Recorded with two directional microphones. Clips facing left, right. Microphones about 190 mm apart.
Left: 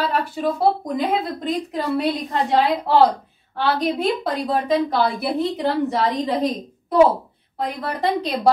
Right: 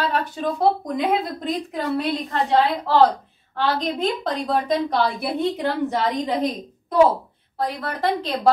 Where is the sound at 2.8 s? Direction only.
15° left (ahead or behind); by 6.5 s centre (ahead or behind).